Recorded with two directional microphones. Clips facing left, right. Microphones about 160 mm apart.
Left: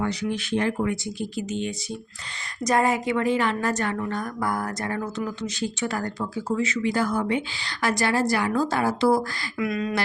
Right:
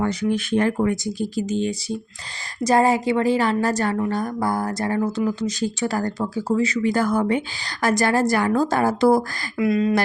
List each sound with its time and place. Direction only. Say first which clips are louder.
0.0 s speech: right 5 dB; 50° right (ahead or behind)
9.6 s speech: right 7 dB; 30° right (ahead or behind)